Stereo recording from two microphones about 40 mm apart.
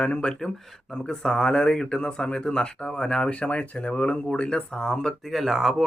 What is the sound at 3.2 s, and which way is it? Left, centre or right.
Speech, left.